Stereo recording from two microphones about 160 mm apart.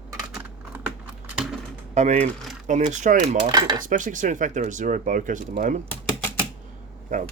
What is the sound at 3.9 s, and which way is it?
Speech, 55° right (ahead or behind).